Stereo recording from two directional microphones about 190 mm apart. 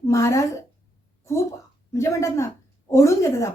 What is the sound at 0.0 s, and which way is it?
A woman's voice, 15° left (ahead or behind).